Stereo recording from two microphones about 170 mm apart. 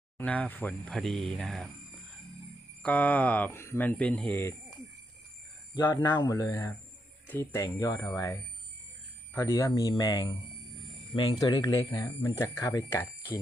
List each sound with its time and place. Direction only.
0.2 s speech: 10° left (ahead or behind)
2.8 s speech: 10° left (ahead or behind)
5.7 s speech: 25° left (ahead or behind)